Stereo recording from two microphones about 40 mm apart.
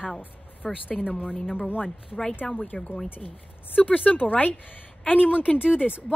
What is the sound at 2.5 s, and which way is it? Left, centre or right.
Speech, left.